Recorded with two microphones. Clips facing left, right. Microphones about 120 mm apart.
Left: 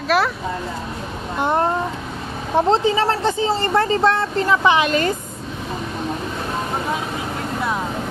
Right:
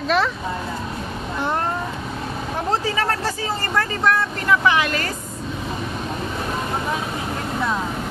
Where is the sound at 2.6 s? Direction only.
25° left (ahead or behind).